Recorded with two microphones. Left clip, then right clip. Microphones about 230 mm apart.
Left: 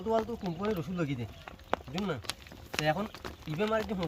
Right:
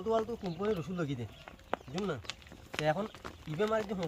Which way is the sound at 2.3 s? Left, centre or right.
Left.